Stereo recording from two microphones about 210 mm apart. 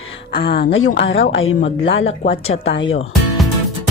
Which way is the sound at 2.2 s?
40° left (ahead or behind).